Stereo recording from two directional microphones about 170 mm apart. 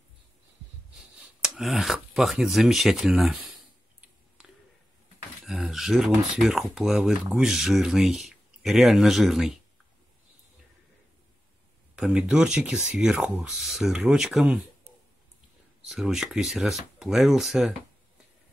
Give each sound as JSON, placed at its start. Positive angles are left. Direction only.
{"t": 1.4, "sound": "speech", "side_deg": 0}
{"t": 5.4, "sound": "speech", "side_deg": 0}
{"t": 11.9, "sound": "speech", "side_deg": -5}
{"t": 15.8, "sound": "speech", "side_deg": 0}